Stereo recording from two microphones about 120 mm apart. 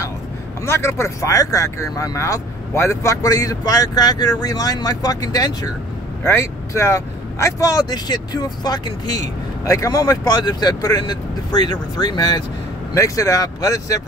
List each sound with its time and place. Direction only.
0.7 s speech: 20° left (ahead or behind)